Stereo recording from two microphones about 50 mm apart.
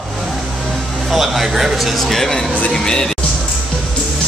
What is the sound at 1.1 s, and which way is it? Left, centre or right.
Speech, centre.